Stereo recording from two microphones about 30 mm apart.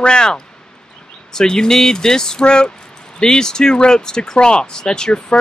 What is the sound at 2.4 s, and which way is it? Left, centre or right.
Speech, left.